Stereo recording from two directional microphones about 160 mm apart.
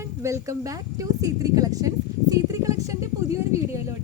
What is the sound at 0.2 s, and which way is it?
A woman's voice, 20° right (ahead or behind).